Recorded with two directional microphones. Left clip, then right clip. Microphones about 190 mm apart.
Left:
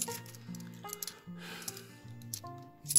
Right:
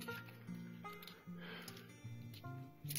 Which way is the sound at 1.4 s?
15° left (ahead or behind).